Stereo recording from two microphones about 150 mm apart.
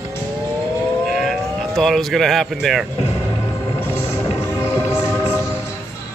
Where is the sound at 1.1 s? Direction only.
Centre (ahead or behind).